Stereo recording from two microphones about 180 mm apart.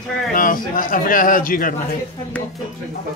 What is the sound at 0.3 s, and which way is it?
A man's voice, 50° left (ahead or behind).